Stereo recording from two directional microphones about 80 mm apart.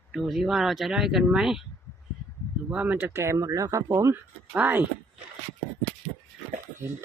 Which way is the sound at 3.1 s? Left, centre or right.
Right.